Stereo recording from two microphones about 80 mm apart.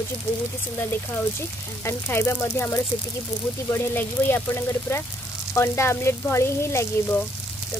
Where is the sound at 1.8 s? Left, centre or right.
Left.